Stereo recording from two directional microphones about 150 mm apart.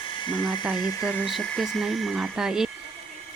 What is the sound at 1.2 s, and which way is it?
Speech, centre (ahead or behind).